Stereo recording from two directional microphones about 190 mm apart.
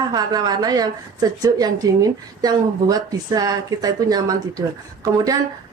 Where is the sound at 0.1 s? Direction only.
20° right (ahead or behind).